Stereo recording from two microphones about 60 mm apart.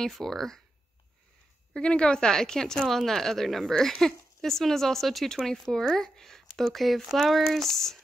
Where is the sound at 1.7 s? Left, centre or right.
Centre.